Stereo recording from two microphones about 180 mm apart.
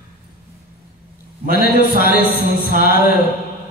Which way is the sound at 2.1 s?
60° left (ahead or behind).